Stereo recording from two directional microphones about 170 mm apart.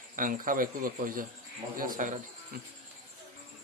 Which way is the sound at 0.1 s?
55° right (ahead or behind).